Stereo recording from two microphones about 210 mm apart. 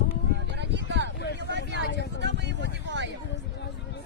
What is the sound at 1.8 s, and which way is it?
Vehicle, 55° left (ahead or behind).